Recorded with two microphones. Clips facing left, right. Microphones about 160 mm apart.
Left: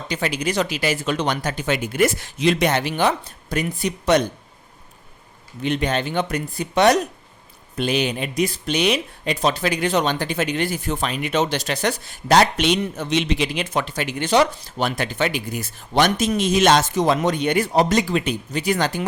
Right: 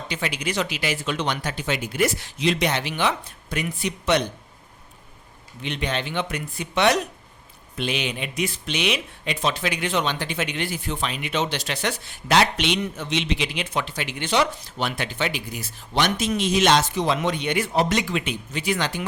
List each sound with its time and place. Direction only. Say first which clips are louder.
0.1 s speech: left 5 dB; 40° left (ahead or behind)
5.6 s speech: left 6 dB; 45° left (ahead or behind)